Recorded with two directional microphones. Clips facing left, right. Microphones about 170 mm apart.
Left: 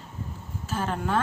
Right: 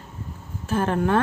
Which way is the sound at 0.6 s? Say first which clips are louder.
Right 7 dB; 55° right (ahead or behind).